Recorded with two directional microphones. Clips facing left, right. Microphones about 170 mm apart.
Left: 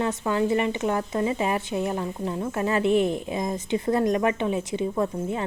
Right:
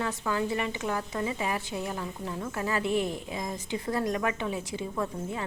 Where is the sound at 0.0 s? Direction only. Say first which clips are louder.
Left 6 dB; 25° left (ahead or behind).